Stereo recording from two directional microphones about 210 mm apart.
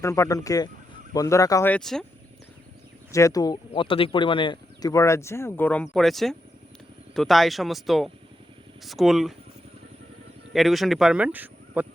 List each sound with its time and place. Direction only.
0.0 s speech: 15° left (ahead or behind)
3.1 s speech: 15° left (ahead or behind); by 9.3 s centre (ahead or behind)
10.5 s speech: centre (ahead or behind)